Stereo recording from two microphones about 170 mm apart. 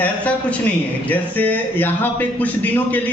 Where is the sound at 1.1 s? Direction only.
10° left (ahead or behind).